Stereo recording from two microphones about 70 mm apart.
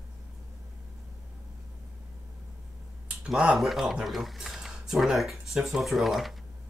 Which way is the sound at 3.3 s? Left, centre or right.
Centre.